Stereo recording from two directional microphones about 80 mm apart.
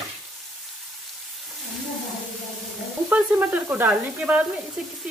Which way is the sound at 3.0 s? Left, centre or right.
Right.